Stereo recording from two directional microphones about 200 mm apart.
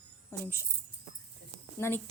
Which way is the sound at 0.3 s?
15° left (ahead or behind).